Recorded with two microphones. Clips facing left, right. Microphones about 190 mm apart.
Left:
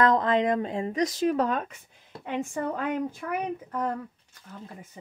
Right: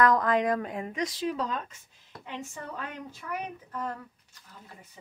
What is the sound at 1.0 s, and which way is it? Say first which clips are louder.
Speech: left 7 dB; 50° left (ahead or behind).